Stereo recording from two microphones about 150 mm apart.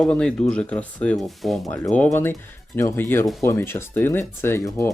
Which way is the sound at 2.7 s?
15° left (ahead or behind).